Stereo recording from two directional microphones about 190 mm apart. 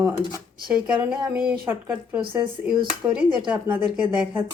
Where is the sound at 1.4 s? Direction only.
5° right (ahead or behind).